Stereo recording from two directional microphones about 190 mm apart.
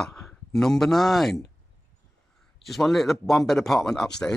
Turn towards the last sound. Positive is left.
turn(degrees=5)  # may be behind; listen again after turning